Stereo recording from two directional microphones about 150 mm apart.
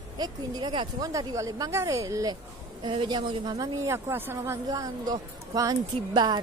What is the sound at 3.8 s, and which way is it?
Speech, 20° right (ahead or behind).